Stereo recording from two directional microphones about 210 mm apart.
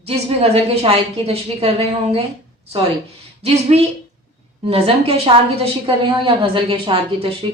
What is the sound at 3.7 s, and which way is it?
A woman's voice, 30° right (ahead or behind).